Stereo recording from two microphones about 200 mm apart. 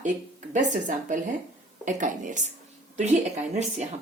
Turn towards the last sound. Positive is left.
turn(degrees=-35)  # may be behind; listen again after turning